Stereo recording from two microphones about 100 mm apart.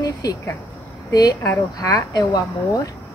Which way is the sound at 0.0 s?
40° left (ahead or behind).